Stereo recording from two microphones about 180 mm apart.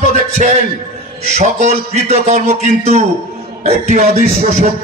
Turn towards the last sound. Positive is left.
turn(degrees=-40)  # may be behind; listen again after turning